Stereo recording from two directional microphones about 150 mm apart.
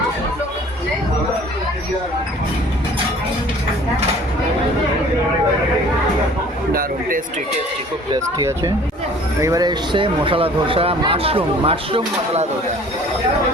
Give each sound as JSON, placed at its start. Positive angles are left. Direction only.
{"t": 8.1, "sound": "speech", "side_deg": -25}